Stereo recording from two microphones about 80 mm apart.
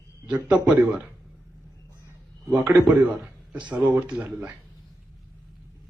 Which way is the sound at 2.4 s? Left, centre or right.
Right.